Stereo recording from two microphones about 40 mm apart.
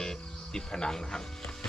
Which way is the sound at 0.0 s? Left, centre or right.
Centre.